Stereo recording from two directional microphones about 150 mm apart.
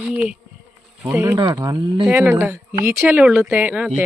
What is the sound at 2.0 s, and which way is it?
Speech, 15° right (ahead or behind).